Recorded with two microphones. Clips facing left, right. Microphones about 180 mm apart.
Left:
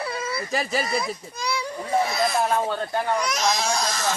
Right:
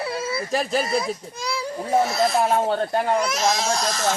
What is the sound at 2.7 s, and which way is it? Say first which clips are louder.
Speech: right 5 dB; 35° right (ahead or behind).